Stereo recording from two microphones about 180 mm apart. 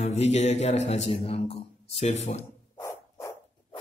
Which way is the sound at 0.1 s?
40° left (ahead or behind).